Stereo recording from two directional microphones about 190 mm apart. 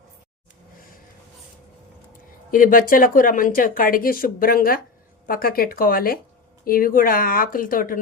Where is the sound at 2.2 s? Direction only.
45° left (ahead or behind).